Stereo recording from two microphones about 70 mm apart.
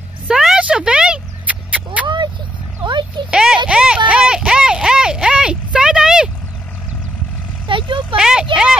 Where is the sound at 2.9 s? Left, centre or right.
Right.